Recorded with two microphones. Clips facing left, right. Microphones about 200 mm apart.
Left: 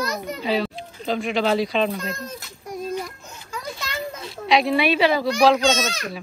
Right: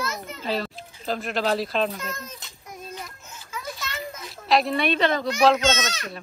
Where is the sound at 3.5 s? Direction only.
30° left (ahead or behind).